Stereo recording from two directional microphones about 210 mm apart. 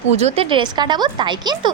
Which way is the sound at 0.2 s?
25° right (ahead or behind).